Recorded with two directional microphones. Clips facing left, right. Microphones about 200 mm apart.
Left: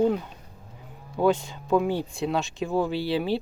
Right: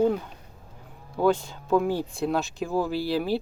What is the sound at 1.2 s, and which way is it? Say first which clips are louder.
Speech: even; 15° left (ahead or behind).